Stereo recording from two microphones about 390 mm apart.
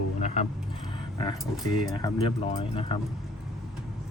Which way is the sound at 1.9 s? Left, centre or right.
Centre.